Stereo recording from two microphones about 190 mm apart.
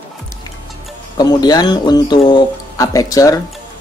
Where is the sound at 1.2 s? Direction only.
20° left (ahead or behind).